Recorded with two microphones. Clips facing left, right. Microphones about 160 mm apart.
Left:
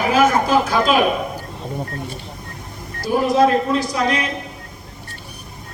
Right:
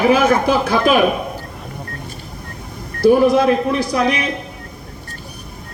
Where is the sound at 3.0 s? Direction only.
60° right (ahead or behind).